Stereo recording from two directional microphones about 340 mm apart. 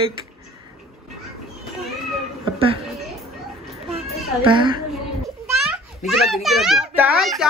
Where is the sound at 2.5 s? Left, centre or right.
Centre.